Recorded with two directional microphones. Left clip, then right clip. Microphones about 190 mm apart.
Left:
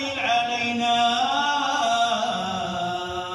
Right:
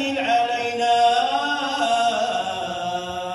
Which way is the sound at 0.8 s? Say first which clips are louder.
Right 4 dB; 35° right (ahead or behind).